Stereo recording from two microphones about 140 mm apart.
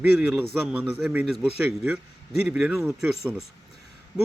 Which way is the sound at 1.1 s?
10° right (ahead or behind).